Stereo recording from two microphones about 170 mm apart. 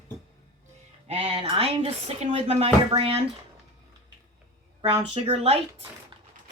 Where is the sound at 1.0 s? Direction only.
35° right (ahead or behind).